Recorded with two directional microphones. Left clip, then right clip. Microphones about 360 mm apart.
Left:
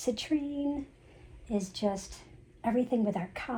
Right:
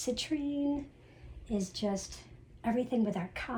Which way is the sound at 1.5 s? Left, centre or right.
Left.